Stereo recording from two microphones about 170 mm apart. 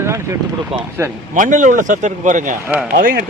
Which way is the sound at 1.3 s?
50° right (ahead or behind).